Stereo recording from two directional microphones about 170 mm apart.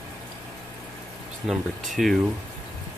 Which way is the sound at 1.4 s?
Centre (ahead or behind).